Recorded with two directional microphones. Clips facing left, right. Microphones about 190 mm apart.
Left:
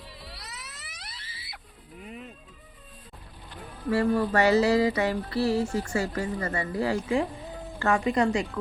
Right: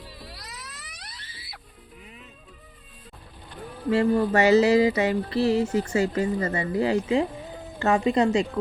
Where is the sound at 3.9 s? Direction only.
20° right (ahead or behind).